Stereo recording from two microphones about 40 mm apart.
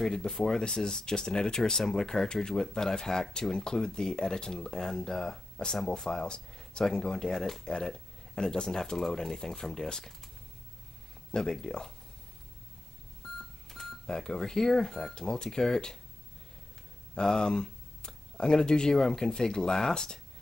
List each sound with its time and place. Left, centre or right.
0.0 s speech: centre
11.3 s speech: centre
13.2 s a sound: centre
13.7 s telephone dialing: centre
14.0 s speech: centre
15.1 s speech: centre
17.1 s speech: centre